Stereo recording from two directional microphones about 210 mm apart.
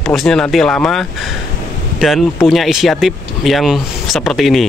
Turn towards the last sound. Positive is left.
turn(degrees=0)  # may be behind; listen again after turning